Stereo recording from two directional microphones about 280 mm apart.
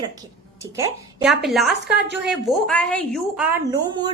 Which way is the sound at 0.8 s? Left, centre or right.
Centre.